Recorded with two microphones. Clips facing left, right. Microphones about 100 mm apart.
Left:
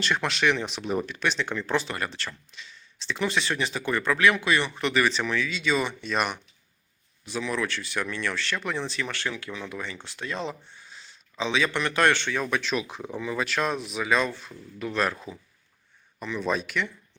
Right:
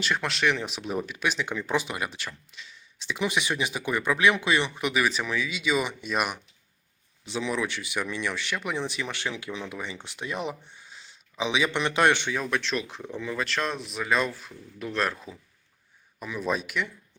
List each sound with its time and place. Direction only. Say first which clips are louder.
0.0 s speech: left 1 dB; centre (ahead or behind)
7.3 s speech: even; 20° right (ahead or behind)
12.3 s speech: left 1 dB; centre (ahead or behind)